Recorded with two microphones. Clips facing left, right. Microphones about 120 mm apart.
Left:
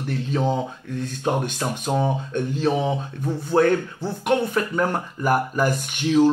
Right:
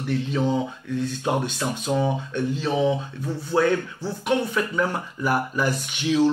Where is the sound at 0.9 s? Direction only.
45° left (ahead or behind).